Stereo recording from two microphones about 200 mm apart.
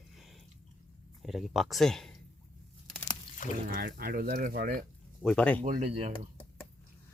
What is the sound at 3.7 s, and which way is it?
Speech, 50° right (ahead or behind).